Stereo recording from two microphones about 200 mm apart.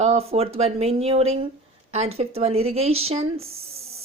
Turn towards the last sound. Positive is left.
turn(degrees=-30)  # may be behind; listen again after turning